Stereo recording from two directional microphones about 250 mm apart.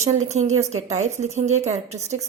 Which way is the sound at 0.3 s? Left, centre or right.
Right.